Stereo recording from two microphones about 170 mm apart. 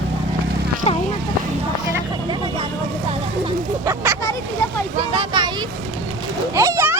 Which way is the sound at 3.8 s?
15° right (ahead or behind).